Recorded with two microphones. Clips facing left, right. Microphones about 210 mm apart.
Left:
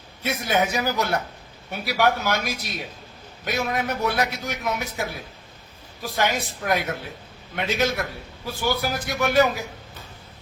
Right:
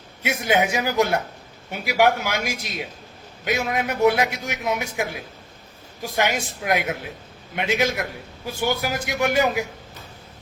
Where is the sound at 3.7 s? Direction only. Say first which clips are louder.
Right 8 dB; 15° right (ahead or behind).